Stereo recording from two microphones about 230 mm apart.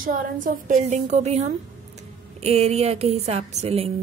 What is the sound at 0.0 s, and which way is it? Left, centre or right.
A woman's voice, right.